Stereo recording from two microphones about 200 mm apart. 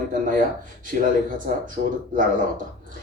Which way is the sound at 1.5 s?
45° right (ahead or behind).